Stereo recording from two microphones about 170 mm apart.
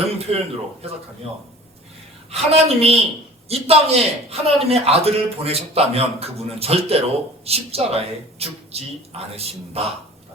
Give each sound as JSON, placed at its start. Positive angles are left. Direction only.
{"t": 0.0, "sound": "speech", "side_deg": -35}
{"t": 2.3, "sound": "a man's voice", "side_deg": -35}